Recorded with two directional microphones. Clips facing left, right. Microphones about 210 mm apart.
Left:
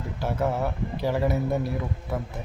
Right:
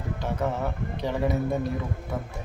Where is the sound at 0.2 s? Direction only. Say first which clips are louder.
Left 3 dB; 5° left (ahead or behind).